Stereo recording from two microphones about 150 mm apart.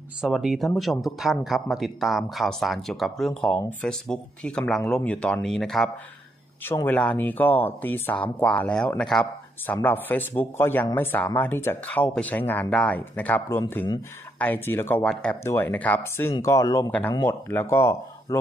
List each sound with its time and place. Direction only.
0.2 s speech: 5° right (ahead or behind)
6.6 s speech: 15° left (ahead or behind)